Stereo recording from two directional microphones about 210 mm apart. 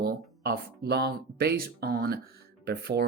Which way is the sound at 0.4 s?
50° right (ahead or behind).